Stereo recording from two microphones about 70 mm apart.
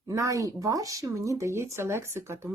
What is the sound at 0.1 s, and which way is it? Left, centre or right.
Speech, right.